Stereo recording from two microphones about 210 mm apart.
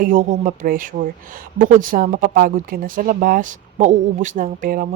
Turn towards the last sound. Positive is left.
turn(degrees=-45)  # may be behind; listen again after turning